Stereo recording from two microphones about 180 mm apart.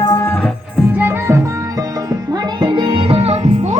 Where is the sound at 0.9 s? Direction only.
15° right (ahead or behind).